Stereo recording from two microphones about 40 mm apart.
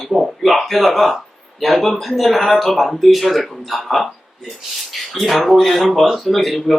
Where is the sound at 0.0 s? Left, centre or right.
Centre.